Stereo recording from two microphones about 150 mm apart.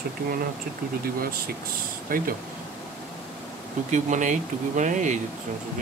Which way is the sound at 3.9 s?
55° right (ahead or behind).